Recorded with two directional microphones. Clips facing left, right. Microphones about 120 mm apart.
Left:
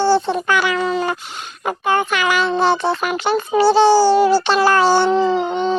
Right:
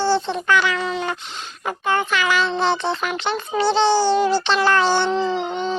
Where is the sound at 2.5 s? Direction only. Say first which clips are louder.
Left 4 dB; 50° left (ahead or behind).